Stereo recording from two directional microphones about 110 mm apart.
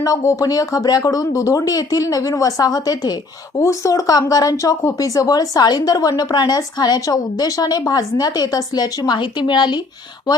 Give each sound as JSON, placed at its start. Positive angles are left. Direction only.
{"t": 0.0, "sound": "speech", "side_deg": 30}